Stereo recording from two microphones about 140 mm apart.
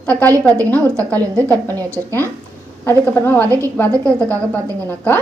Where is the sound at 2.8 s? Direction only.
15° left (ahead or behind).